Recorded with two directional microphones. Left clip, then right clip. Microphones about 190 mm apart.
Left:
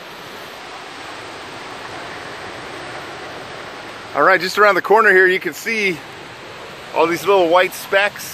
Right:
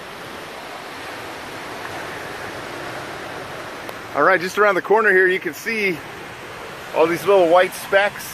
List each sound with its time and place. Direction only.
4.1 s speech: 10° left (ahead or behind)
7.0 s speech: 15° left (ahead or behind)